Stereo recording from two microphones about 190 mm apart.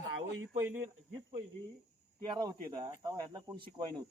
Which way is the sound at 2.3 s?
25° right (ahead or behind).